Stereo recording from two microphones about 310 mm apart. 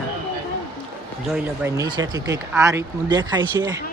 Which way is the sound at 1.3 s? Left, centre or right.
Centre.